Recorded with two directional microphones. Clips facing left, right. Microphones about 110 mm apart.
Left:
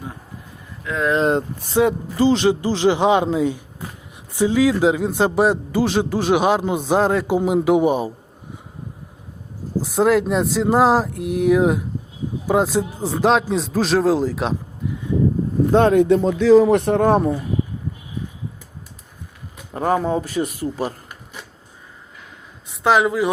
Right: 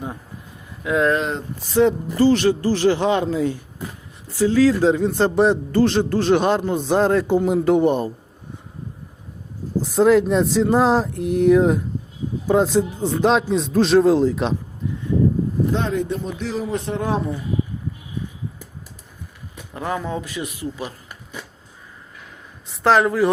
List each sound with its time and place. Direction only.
0.8 s speech: 15° right (ahead or behind)
1.2 s speech: 45° left (ahead or behind)
1.8 s a man's voice: 15° left (ahead or behind)
9.8 s speech: 5° left (ahead or behind)
15.7 s speech: 60° left (ahead or behind)
16.6 s speech: 75° left (ahead or behind); by 17.3 s 55° left (ahead or behind)
19.7 s a man's voice: 40° left (ahead or behind)
22.7 s speech: 5° left (ahead or behind)